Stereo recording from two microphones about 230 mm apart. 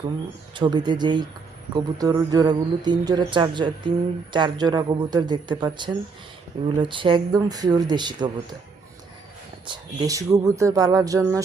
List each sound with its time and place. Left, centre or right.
0.5 s speech: centre
9.6 s speech: centre